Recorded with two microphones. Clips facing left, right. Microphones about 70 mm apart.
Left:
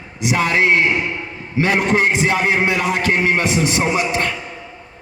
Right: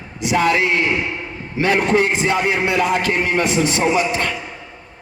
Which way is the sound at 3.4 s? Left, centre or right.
Right.